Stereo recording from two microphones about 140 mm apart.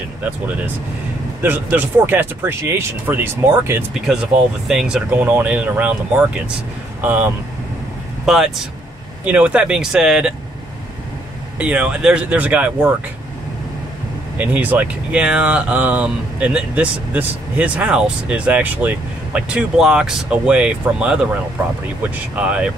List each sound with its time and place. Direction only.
1.4 s speech: 15° right (ahead or behind)
4.1 s speech: 5° right (ahead or behind)
8.3 s speech: centre (ahead or behind)
11.5 s speech: 10° right (ahead or behind)
14.4 s speech: 10° right (ahead or behind)